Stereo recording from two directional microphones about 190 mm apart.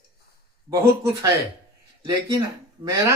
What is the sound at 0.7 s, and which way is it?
Speech, 15° right (ahead or behind).